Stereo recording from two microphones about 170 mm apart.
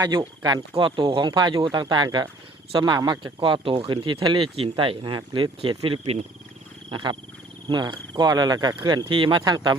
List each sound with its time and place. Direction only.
0.0 s speech: 25° right (ahead or behind)